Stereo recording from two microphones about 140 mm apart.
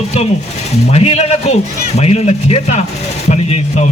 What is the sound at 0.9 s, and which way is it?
Speech, 50° left (ahead or behind).